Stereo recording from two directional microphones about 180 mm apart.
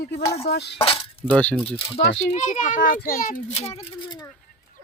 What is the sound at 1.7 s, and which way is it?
A child's voice, 35° left (ahead or behind).